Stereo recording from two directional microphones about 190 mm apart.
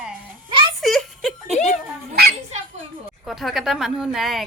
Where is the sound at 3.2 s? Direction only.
Centre (ahead or behind).